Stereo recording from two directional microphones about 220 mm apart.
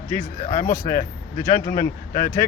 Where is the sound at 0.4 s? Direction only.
35° left (ahead or behind).